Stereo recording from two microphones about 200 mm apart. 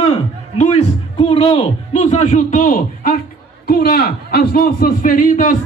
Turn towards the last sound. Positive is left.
turn(degrees=40)  # may be behind; listen again after turning